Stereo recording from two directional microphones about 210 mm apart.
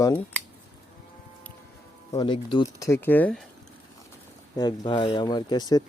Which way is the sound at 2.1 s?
20° left (ahead or behind).